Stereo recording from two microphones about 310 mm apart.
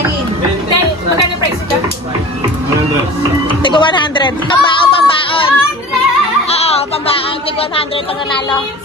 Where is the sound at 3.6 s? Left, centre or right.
Centre.